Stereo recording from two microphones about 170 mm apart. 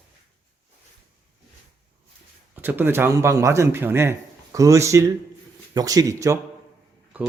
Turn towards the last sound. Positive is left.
turn(degrees=-20)  # may be behind; listen again after turning